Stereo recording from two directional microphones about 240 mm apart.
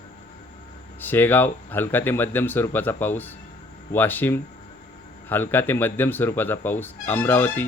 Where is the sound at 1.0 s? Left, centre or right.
Centre.